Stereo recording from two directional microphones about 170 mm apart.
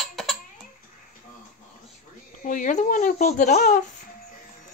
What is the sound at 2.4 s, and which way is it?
Speech, 50° left (ahead or behind).